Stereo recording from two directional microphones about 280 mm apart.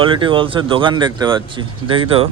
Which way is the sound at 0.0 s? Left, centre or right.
Centre.